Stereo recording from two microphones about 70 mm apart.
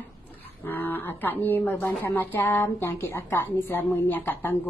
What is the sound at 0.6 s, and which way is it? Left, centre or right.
Speech, left.